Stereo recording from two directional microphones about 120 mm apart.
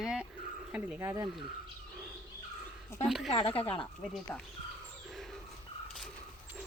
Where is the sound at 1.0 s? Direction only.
30° right (ahead or behind).